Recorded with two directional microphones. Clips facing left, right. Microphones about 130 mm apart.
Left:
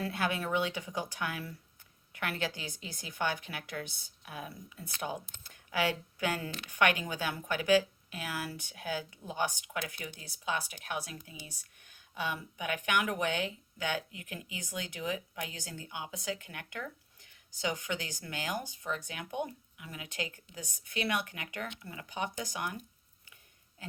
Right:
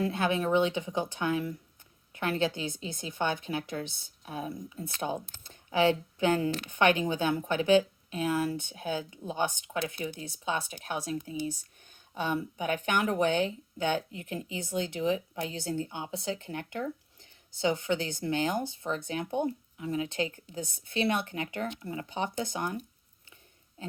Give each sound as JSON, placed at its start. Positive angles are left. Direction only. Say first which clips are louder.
{"t": 0.0, "sound": "speech", "louder": "right 5 dB", "side_deg": -25}